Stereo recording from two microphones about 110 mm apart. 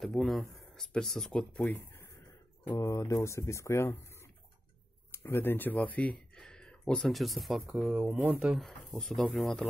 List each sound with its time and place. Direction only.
0.0 s speech: centre (ahead or behind)
1.6 s speech: 15° left (ahead or behind)
2.7 s speech: 30° left (ahead or behind); by 7.9 s centre (ahead or behind)
7.9 s speech: 15° right (ahead or behind)
8.5 s speech: centre (ahead or behind)